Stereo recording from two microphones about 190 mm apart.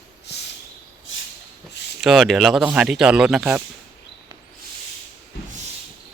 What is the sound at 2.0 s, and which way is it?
Speech, centre (ahead or behind).